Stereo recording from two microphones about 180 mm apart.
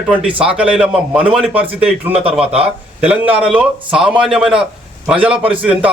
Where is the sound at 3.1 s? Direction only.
5° right (ahead or behind).